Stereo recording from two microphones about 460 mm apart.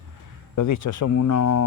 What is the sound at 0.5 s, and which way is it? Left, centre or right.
Speech, left.